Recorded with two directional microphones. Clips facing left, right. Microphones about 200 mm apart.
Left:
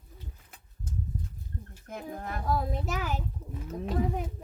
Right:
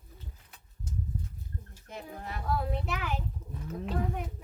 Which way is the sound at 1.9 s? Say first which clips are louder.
Left 4 dB; 50° left (ahead or behind).